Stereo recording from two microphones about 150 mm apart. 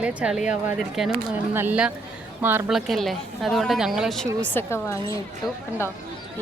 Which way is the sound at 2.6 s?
Centre (ahead or behind).